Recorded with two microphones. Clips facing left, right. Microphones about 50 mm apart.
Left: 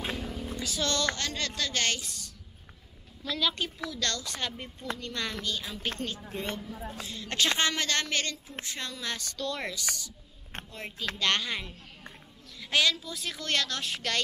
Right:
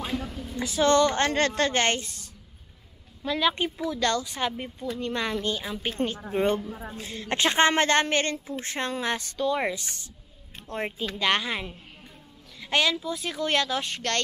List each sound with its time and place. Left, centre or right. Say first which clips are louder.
0.1 s a sound: right 3 dB; centre
0.6 s a woman's voice: right 11 dB; right
1.3 s a woman's voice: right 9 dB; right
11.1 s speech: right 4 dB; centre
13.8 s speech: right 3 dB; centre